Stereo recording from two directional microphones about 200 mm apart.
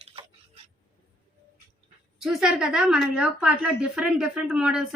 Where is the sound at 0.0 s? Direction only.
30° right (ahead or behind).